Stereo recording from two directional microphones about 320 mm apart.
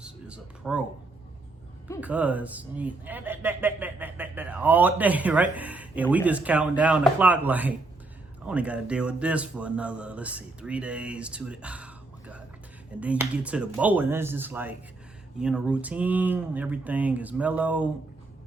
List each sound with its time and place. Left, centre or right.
0.0 s speech: centre
2.0 s speech: centre